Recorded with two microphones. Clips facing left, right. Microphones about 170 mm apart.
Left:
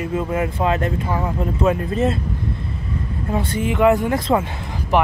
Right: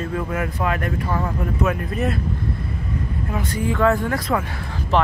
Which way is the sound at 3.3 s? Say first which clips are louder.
Left 3 dB; 25° left (ahead or behind).